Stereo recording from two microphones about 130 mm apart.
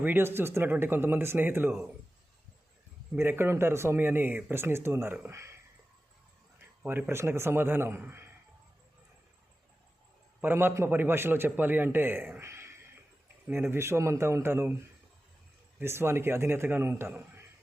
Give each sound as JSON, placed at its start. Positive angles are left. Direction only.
{"t": 0.0, "sound": "a man's voice", "side_deg": -15}
{"t": 3.2, "sound": "a man's voice", "side_deg": -20}
{"t": 6.6, "sound": "a man's voice", "side_deg": -15}
{"t": 10.4, "sound": "a man's voice", "side_deg": -20}
{"t": 15.8, "sound": "a man's voice", "side_deg": -20}